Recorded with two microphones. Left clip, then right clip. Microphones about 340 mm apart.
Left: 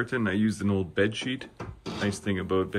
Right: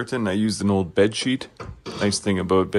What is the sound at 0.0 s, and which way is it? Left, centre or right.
Speech, centre.